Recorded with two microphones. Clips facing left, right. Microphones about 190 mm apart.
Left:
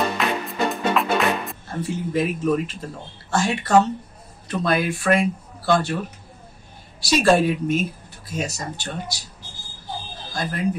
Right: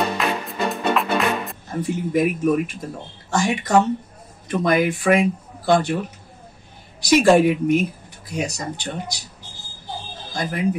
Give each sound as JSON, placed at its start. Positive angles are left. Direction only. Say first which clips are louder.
{"t": 0.2, "sound": "music", "louder": "even", "side_deg": 0}
{"t": 1.7, "sound": "speech", "louder": "right 3 dB", "side_deg": -15}
{"t": 7.1, "sound": "speech", "louder": "right 3 dB", "side_deg": -15}
{"t": 10.3, "sound": "speech", "louder": "right 2 dB", "side_deg": -15}